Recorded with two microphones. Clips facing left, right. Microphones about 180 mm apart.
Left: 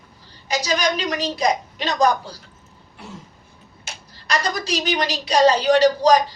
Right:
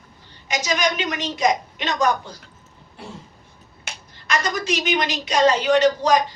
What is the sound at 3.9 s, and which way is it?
Finger snapping, 60° right (ahead or behind).